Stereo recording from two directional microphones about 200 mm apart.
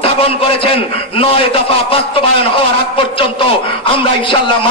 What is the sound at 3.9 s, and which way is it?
Speech, 25° left (ahead or behind).